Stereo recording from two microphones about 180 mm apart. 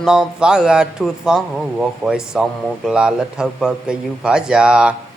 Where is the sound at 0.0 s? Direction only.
5° right (ahead or behind).